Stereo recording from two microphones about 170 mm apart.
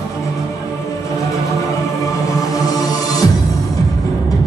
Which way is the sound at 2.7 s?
20° left (ahead or behind).